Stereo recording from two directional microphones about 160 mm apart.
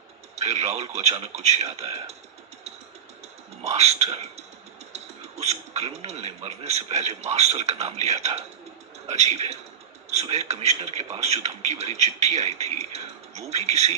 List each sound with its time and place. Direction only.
0.3 s speech: 40° right (ahead or behind)
3.6 s a man's voice: 45° right (ahead or behind)